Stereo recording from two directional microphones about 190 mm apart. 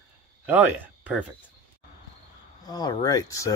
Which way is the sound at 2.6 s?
20° left (ahead or behind).